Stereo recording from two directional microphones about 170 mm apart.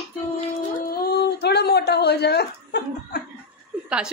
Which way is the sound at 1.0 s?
75° left (ahead or behind).